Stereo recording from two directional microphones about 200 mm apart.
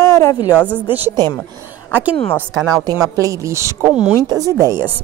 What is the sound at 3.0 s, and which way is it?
A woman's voice, 15° right (ahead or behind).